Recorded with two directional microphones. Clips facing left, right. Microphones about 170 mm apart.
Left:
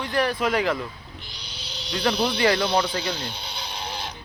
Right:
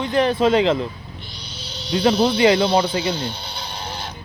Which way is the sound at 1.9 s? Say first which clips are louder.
Right 7 dB; 25° right (ahead or behind).